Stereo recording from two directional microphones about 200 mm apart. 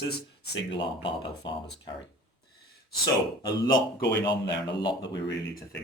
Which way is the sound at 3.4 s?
20° left (ahead or behind).